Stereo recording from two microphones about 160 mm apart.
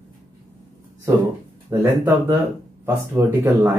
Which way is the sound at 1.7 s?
15° right (ahead or behind).